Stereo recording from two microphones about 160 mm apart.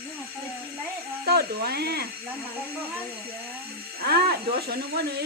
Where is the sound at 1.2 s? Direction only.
80° right.